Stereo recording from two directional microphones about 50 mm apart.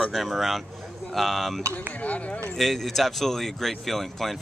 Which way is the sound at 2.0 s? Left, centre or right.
Left.